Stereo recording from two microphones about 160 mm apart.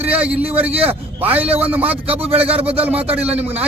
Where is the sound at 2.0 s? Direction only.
35° right (ahead or behind).